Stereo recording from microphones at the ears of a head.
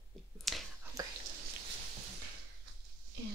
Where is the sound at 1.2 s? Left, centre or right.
Right.